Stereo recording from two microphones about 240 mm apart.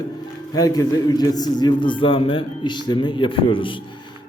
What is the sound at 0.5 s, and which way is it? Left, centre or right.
A man's voice, centre.